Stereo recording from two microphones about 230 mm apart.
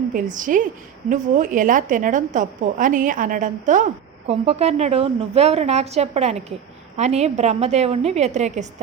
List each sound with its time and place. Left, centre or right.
0.1 s a woman's voice: right